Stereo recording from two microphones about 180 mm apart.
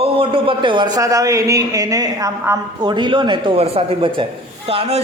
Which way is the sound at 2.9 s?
25° right (ahead or behind).